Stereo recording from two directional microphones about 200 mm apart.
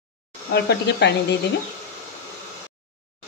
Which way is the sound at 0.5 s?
55° left (ahead or behind).